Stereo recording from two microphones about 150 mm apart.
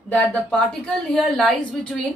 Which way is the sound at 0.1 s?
10° left (ahead or behind).